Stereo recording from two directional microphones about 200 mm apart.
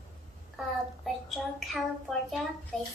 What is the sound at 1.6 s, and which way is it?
Speech, centre (ahead or behind).